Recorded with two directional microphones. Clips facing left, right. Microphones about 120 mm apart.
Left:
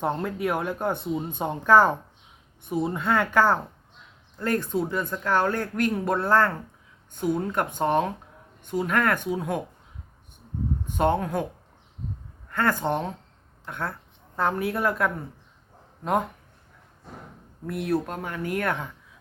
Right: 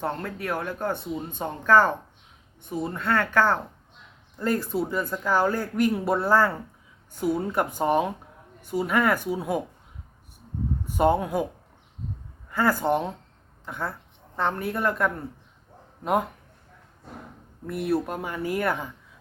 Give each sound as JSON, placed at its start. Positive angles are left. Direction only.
{"t": 0.0, "sound": "speech", "side_deg": 15}
{"t": 4.4, "sound": "speech", "side_deg": -5}
{"t": 10.8, "sound": "speech", "side_deg": -5}
{"t": 12.5, "sound": "speech", "side_deg": -5}
{"t": 17.7, "sound": "speech", "side_deg": -5}